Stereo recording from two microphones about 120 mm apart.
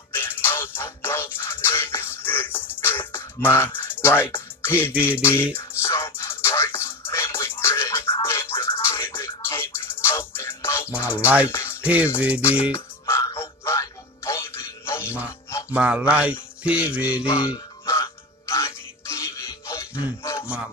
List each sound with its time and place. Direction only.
0.1 s music: 20° left (ahead or behind)
5.0 s mantra: 20° left (ahead or behind)
5.6 s music: 25° left (ahead or behind)
11.1 s music: 10° right (ahead or behind)
11.4 s music: 20° left (ahead or behind)
11.8 s music: 10° right (ahead or behind)
12.7 s music: 25° left (ahead or behind)
15.0 s music: 10° right (ahead or behind)
18.5 s music: 25° left (ahead or behind)
20.4 s speech: 10° right (ahead or behind)